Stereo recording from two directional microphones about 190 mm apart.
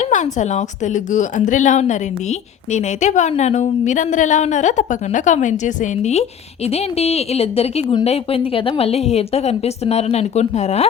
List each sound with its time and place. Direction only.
0.0 s a woman's voice: 40° left (ahead or behind)